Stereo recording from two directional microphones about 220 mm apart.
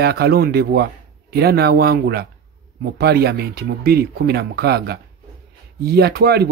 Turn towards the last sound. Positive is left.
turn(degrees=-45)  # may be behind; listen again after turning